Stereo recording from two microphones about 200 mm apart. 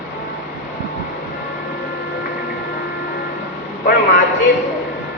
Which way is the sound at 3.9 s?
50° left (ahead or behind).